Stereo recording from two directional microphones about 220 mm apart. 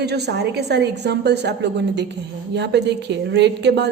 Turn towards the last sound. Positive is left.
turn(degrees=-50)  # may be behind; listen again after turning